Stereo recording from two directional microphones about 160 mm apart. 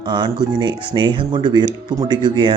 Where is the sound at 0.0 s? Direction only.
30° right (ahead or behind).